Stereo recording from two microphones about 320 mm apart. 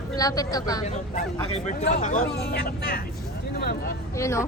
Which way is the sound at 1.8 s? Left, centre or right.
Left.